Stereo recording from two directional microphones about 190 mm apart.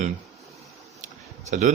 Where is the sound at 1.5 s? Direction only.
40° right (ahead or behind).